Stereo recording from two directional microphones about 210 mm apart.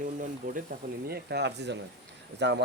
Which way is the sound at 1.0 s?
50° right (ahead or behind).